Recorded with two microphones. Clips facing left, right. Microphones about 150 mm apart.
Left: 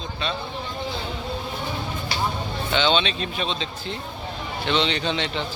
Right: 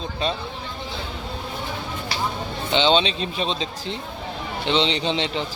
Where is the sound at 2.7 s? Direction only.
30° right (ahead or behind).